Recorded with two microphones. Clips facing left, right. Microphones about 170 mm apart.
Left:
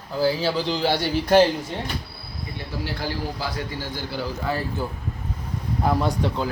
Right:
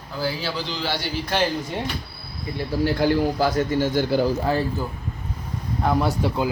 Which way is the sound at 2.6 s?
50° right (ahead or behind).